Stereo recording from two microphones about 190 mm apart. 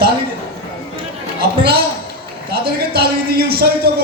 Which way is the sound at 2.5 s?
55° right (ahead or behind).